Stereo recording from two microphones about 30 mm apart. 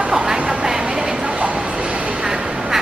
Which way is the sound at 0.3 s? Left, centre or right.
Right.